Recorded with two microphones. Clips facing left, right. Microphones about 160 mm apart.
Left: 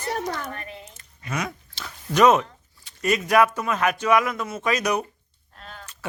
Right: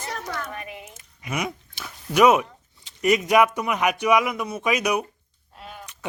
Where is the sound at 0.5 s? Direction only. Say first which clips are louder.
Right 2 dB; 15° right (ahead or behind).